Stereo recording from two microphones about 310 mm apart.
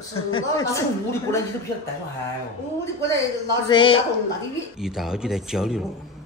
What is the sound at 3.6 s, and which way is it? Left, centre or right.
Speech, centre.